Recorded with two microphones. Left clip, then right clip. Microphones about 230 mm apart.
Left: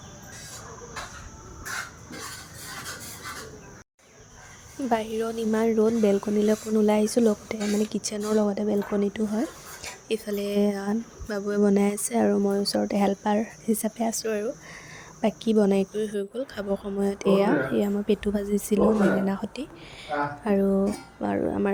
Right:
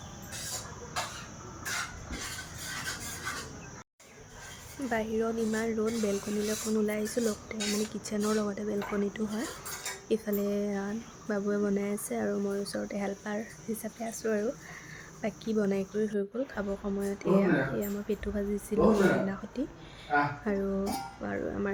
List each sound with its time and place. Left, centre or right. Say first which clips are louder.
4.8 s a woman's voice: left 5 dB; left